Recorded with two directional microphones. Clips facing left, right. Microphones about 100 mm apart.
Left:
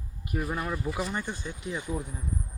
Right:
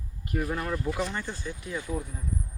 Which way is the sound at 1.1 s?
20° left (ahead or behind).